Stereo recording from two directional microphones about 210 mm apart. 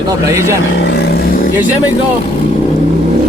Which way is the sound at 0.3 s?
15° right (ahead or behind).